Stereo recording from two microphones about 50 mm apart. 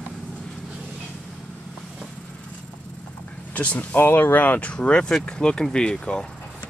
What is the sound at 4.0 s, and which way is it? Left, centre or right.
Speech, left.